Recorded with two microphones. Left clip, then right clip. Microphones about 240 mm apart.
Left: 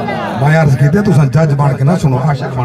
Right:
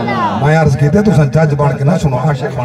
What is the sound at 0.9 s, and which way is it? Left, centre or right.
A man's voice, left.